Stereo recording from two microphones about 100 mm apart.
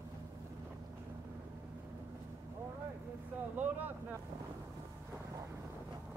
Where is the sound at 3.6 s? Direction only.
15° right (ahead or behind).